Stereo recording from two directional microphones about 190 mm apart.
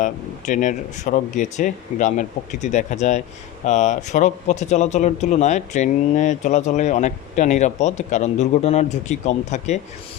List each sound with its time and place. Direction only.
0.0 s speech: 40° left (ahead or behind)